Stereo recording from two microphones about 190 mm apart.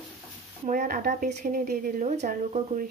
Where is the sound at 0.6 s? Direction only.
45° right (ahead or behind).